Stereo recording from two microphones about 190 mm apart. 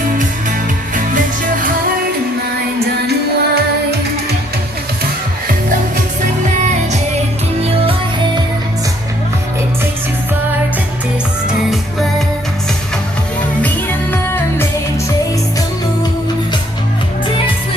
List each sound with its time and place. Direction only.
2.8 s music: 55° right (ahead or behind)
14.1 s music: 10° left (ahead or behind)